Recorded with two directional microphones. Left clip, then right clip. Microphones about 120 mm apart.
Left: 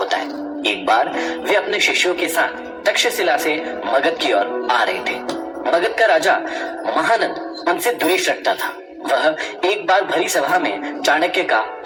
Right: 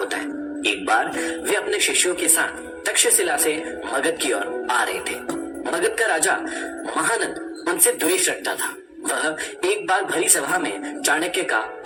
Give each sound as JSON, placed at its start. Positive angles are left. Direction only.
{"t": 0.6, "sound": "speech", "side_deg": 30}